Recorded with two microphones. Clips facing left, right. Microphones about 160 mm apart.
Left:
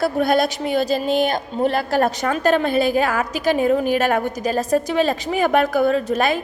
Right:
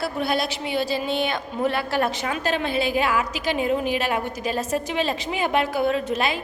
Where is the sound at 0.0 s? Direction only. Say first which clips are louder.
Left 7 dB; 45° left (ahead or behind).